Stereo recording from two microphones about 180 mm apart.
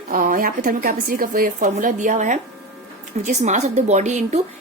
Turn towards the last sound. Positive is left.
turn(degrees=-40)  # may be behind; listen again after turning